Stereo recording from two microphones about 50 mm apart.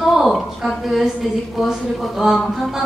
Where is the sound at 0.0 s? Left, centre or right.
Centre.